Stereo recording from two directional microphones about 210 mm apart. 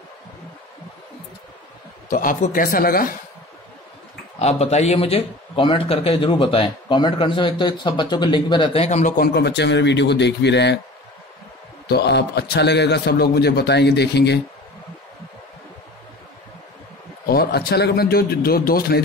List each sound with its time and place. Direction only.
2.0 s speech: 40° left (ahead or behind)
4.4 s speech: 30° left (ahead or behind); by 10.8 s 55° left (ahead or behind)
11.9 s a man's voice: 50° left (ahead or behind)
17.3 s a man's voice: 50° left (ahead or behind)